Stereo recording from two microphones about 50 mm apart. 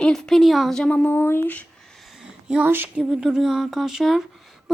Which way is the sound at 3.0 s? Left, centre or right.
Centre.